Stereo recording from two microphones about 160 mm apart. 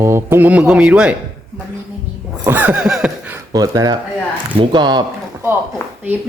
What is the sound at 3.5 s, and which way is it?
Speech, 20° right (ahead or behind).